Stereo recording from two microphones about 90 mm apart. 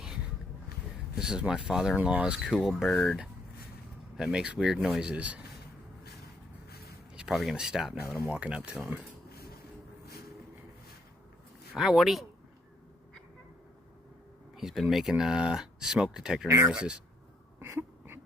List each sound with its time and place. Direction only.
1.1 s speech: 10° right (ahead or behind)
2.0 s speech: 15° right (ahead or behind)
2.4 s speech: centre (ahead or behind)
4.2 s speech: 5° right (ahead or behind)
7.2 s speech: 5° right (ahead or behind)
11.8 s speech: 5° right (ahead or behind)
14.5 s speech: 5° right (ahead or behind)
16.5 s speech: 35° right (ahead or behind)
16.7 s speech: 10° right (ahead or behind)
17.6 s a sound: 25° right (ahead or behind)